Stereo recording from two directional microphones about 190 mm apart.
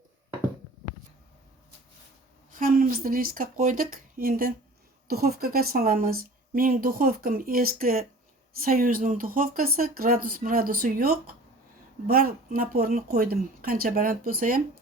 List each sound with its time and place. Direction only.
2.5 s speech: 50° right (ahead or behind)